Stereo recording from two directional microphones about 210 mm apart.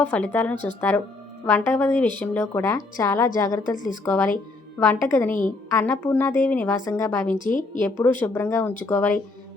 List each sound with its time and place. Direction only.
0.0 s a woman's voice: 5° left (ahead or behind)
7.3 s a woman's voice: 40° left (ahead or behind)
7.8 s a woman's voice: 10° left (ahead or behind)